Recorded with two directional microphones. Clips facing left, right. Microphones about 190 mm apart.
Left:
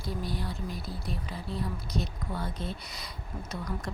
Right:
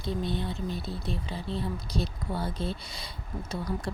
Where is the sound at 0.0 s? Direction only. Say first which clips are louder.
Right 4 dB; 25° right (ahead or behind).